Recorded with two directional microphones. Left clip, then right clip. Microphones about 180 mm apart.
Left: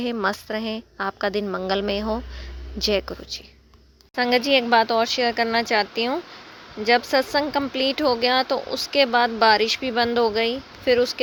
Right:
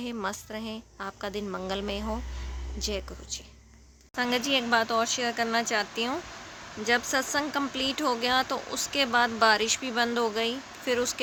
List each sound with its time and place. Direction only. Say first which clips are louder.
0.0 s a woman's voice: left 9 dB; 35° left (ahead or behind)
4.1 s speech: left 8 dB; 25° left (ahead or behind)